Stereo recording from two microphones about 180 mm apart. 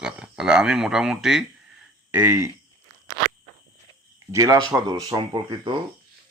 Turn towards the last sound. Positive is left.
turn(degrees=-25)  # may be behind; listen again after turning